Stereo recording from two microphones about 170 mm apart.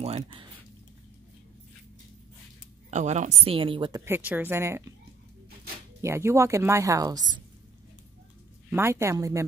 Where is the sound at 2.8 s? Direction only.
40° right (ahead or behind); by 4.9 s 15° right (ahead or behind).